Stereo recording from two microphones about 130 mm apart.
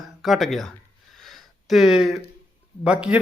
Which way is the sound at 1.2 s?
Centre (ahead or behind).